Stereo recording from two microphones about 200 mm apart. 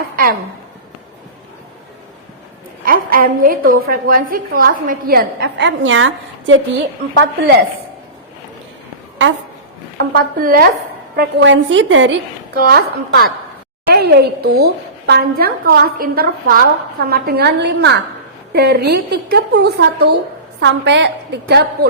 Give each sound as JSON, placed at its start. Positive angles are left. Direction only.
{"t": 2.8, "sound": "a woman's voice", "side_deg": -45}
{"t": 7.1, "sound": "a woman's voice", "side_deg": -60}
{"t": 10.0, "sound": "a woman's voice", "side_deg": -45}
{"t": 11.2, "sound": "a woman's voice", "side_deg": -60}
{"t": 12.5, "sound": "a woman's voice", "side_deg": -50}